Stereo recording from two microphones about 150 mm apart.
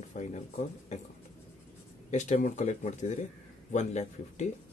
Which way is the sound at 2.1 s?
50° left (ahead or behind).